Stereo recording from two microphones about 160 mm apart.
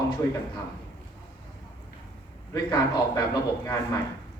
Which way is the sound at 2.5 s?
25° left (ahead or behind).